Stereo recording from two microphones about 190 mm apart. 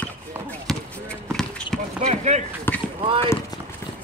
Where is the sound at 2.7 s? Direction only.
10° left (ahead or behind).